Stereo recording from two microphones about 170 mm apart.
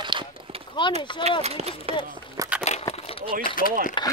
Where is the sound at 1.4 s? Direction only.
40° right (ahead or behind).